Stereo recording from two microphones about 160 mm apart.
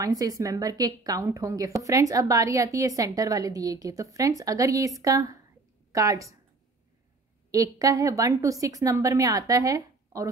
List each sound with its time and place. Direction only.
0.0 s a woman's voice: 20° right (ahead or behind)
7.5 s a woman's voice: 20° right (ahead or behind)